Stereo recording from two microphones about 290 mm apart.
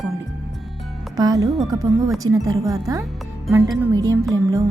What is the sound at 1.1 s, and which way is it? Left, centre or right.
Speech, centre.